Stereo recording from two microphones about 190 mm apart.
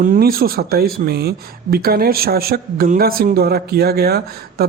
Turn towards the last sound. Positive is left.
turn(degrees=-55)  # may be behind; listen again after turning